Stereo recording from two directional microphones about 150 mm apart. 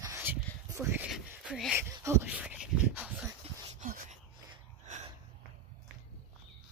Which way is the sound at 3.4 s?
40° right (ahead or behind).